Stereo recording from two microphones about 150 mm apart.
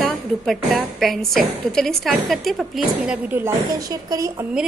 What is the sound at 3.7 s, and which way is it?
Speech, 25° right (ahead or behind).